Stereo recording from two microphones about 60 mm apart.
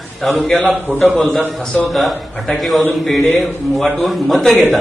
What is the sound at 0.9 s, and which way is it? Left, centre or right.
Speech, right.